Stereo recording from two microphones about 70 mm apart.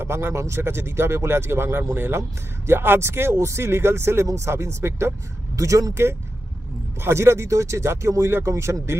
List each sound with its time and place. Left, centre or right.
0.0 s speech: right
5.5 s speech: right
7.0 s speech: right